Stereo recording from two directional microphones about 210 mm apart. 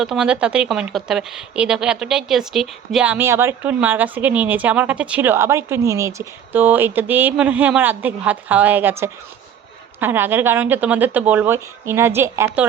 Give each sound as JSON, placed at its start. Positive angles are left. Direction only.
{"t": 0.0, "sound": "speech", "side_deg": -5}